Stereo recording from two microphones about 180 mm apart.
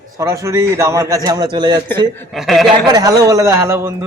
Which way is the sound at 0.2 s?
15° right (ahead or behind).